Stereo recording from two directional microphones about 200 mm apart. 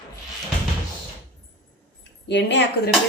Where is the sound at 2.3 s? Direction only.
60° left (ahead or behind).